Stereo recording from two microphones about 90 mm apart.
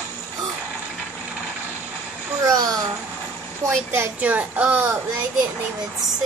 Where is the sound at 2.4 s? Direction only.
40° right (ahead or behind).